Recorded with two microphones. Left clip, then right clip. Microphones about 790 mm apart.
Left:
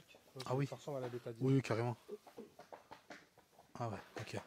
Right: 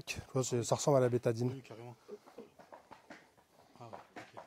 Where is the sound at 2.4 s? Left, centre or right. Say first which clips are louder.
Right 2 dB; centre.